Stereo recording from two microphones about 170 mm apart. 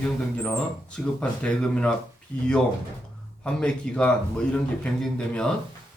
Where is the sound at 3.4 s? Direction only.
5° left (ahead or behind).